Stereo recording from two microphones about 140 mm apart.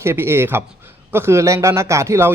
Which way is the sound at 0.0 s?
20° right (ahead or behind).